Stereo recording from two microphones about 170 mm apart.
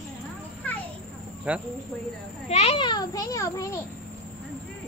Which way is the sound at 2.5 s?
35° left (ahead or behind).